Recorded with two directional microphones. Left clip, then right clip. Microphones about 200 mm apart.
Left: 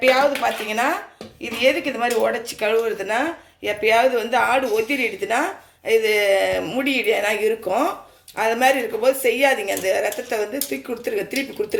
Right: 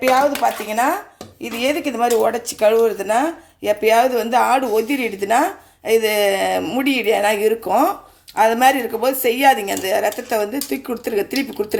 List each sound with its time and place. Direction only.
0.0 s speech: 60° right (ahead or behind)